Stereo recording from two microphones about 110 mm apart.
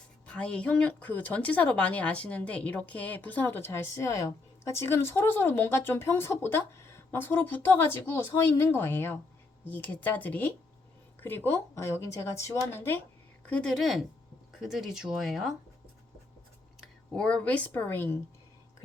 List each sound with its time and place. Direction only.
0.3 s speech: 10° left (ahead or behind)
13.5 s speech: 10° left (ahead or behind)
16.8 s speech: 10° left (ahead or behind)